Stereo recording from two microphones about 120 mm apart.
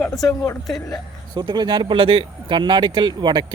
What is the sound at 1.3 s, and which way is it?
Speech, 35° right (ahead or behind).